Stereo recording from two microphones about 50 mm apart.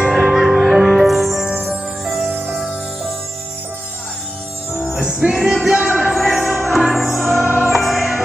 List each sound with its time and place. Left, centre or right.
0.0 s music: centre
4.8 s music: centre
6.1 s music: centre